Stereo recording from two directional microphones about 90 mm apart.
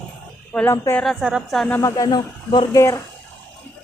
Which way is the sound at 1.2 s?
10° right (ahead or behind).